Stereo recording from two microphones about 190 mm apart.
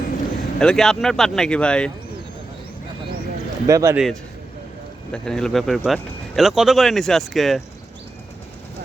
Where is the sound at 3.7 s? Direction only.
15° right (ahead or behind).